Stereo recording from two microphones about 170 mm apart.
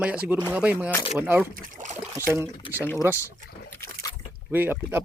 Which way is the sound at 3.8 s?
20° left (ahead or behind).